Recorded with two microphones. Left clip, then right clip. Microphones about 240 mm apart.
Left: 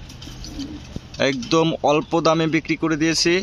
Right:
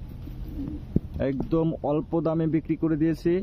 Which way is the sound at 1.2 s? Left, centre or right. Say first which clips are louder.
Left 8 dB; centre.